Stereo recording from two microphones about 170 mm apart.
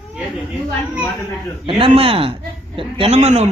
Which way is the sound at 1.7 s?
30° right (ahead or behind).